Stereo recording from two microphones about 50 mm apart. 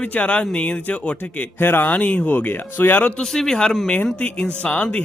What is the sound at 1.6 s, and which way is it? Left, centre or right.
Speech, left.